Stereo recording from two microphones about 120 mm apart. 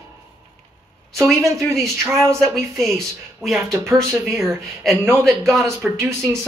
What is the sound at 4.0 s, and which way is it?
Speech, 25° right (ahead or behind).